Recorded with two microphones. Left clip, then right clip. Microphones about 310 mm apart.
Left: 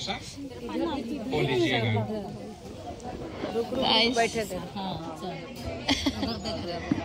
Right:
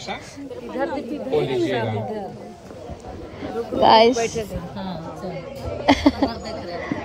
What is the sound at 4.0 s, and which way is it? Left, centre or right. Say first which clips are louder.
Speech: right 8 dB; centre.